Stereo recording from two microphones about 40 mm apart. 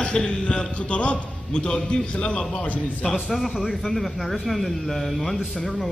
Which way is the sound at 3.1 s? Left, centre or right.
Centre.